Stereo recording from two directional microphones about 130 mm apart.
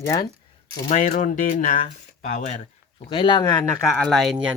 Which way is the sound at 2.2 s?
80° left.